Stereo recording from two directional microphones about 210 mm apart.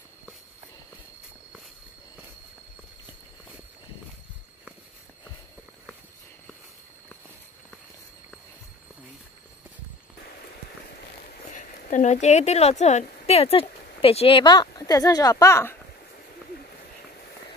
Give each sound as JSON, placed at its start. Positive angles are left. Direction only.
{"t": 11.2, "sound": "speech", "side_deg": 35}